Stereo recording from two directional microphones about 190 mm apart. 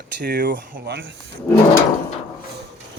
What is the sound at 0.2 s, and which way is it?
Speech, 55° right (ahead or behind).